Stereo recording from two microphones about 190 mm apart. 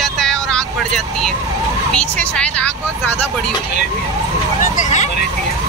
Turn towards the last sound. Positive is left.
turn(degrees=40)  # may be behind; listen again after turning